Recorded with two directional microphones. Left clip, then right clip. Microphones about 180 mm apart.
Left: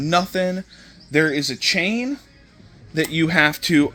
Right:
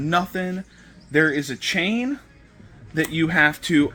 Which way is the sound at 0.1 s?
50° left (ahead or behind).